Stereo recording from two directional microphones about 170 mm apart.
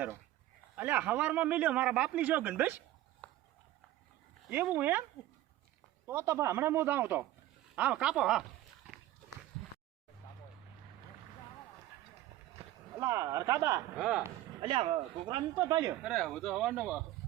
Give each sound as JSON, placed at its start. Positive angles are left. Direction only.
{"t": 0.8, "sound": "a man's voice", "side_deg": -10}
{"t": 3.2, "sound": "a sound", "side_deg": 10}
{"t": 4.4, "sound": "a man's voice", "side_deg": -10}
{"t": 6.1, "sound": "a man's voice", "side_deg": -15}
{"t": 13.0, "sound": "a man's voice", "side_deg": -15}
{"t": 13.9, "sound": "speech", "side_deg": -5}
{"t": 14.6, "sound": "speech", "side_deg": -35}
{"t": 16.0, "sound": "speech", "side_deg": 0}